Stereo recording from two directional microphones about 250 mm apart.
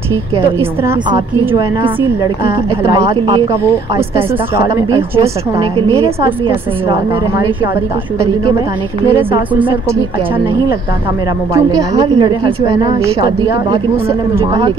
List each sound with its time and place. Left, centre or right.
0.6 s a woman's voice: centre
5.9 s speech: right
9.1 s a woman's voice: centre
12.0 s speech: centre